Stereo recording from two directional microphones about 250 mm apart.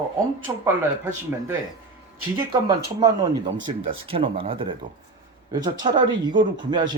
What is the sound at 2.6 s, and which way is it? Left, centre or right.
Speech, centre.